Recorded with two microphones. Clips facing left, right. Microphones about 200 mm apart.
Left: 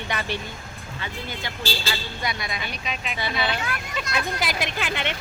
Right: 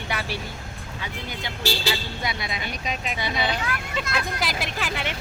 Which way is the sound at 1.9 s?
25° right (ahead or behind).